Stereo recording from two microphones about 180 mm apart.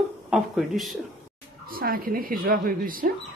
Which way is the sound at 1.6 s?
55° right (ahead or behind).